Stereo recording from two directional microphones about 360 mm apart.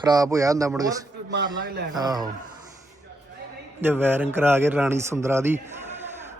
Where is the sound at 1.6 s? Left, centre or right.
Right.